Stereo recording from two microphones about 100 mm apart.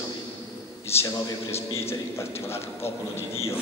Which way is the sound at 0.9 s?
25° left (ahead or behind).